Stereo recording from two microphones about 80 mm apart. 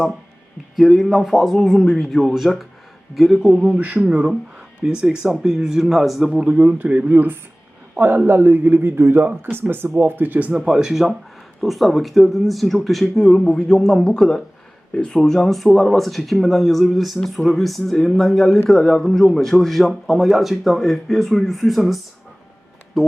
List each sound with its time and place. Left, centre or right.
0.8 s speech: centre
3.4 s speech: centre
6.4 s a man's voice: centre